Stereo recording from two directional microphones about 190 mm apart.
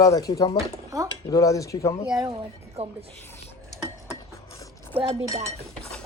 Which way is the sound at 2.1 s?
20° right (ahead or behind).